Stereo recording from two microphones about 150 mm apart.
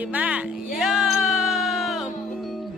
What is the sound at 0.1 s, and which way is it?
Music, 10° right (ahead or behind).